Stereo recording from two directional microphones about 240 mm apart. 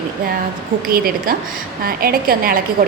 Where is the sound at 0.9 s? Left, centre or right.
Right.